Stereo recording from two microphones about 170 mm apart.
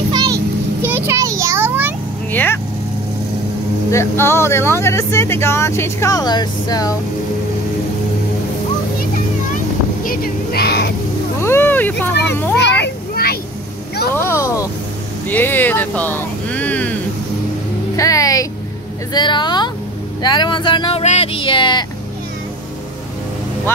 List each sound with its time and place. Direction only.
0.1 s a sound: 25° right (ahead or behind)
0.8 s a sound: 15° right (ahead or behind)
2.3 s speech: 10° left (ahead or behind)
3.9 s speech: 15° left (ahead or behind)
10.0 s a sound: 60° left (ahead or behind)
11.4 s speech: 15° left (ahead or behind)
12.8 s children playing: 65° left (ahead or behind)
14.1 s speech: 15° left (ahead or behind)
17.9 s speech: 20° left (ahead or behind)